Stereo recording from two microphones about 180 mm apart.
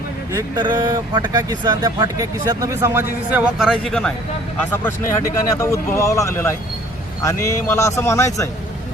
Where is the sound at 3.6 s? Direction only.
Centre (ahead or behind).